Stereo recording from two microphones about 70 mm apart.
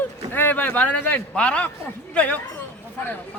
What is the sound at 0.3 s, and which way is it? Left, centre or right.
A man's voice, left.